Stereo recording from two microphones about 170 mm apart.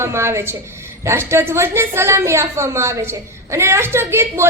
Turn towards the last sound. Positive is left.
turn(degrees=-15)  # may be behind; listen again after turning